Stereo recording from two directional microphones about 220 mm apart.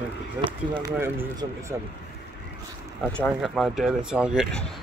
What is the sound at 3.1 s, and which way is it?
Speech, centre (ahead or behind).